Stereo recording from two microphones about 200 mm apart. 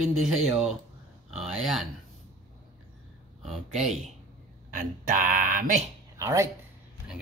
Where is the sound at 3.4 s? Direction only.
Centre (ahead or behind).